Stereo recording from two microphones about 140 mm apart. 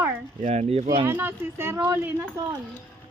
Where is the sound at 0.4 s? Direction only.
50° right (ahead or behind).